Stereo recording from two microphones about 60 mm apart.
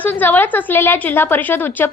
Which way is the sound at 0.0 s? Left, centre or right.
Left.